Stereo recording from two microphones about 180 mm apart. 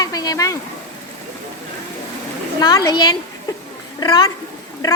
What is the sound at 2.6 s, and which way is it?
Speech, 20° left (ahead or behind).